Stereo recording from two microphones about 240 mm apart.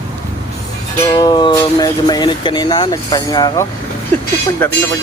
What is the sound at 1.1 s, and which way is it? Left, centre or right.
Speech, centre.